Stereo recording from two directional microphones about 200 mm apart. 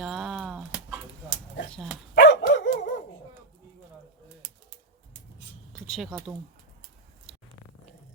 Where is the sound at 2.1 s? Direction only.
60° left (ahead or behind).